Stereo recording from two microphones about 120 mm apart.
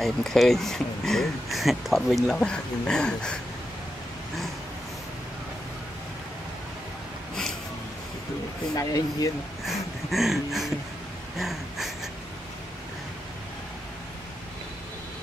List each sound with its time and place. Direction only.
0.0 s speech: centre (ahead or behind)
8.7 s speech: 30° left (ahead or behind)
9.7 s speech: centre (ahead or behind)
11.3 s a sound: centre (ahead or behind)